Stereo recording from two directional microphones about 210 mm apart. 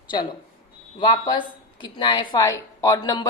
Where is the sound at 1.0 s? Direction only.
20° left (ahead or behind).